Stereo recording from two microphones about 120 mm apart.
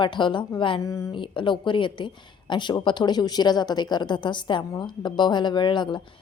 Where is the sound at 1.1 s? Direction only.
45° left (ahead or behind).